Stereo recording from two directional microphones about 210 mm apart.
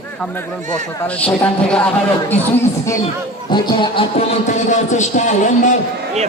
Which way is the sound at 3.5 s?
20° left (ahead or behind).